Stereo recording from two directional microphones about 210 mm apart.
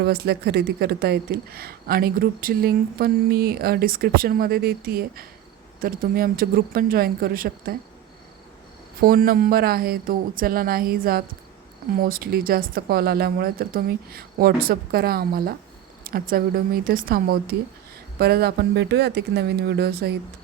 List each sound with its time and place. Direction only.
0.0 s speech: 50° right (ahead or behind)
9.0 s speech: 45° right (ahead or behind)